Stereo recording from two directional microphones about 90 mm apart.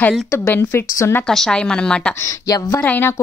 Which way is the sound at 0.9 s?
30° left (ahead or behind).